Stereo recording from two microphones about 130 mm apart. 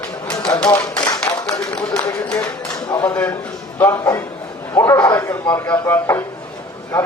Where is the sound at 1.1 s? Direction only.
25° left (ahead or behind).